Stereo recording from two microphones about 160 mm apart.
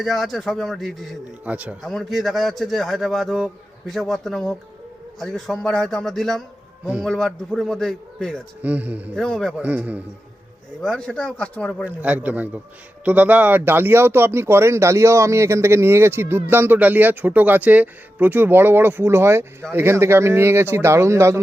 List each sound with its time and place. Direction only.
0.0 s a man's voice: centre (ahead or behind)
8.6 s a man's voice: 10° right (ahead or behind)
9.1 s a man's voice: 5° left (ahead or behind)
9.5 s a man's voice: 10° right (ahead or behind)
10.8 s a man's voice: 5° left (ahead or behind)
11.9 s a man's voice: 10° right (ahead or behind)